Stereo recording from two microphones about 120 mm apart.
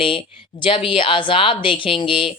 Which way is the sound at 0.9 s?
45° left (ahead or behind).